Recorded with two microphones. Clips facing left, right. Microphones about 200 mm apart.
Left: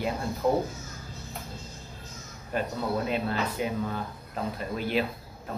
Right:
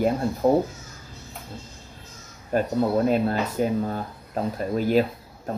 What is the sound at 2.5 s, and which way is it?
Speech, 45° right (ahead or behind).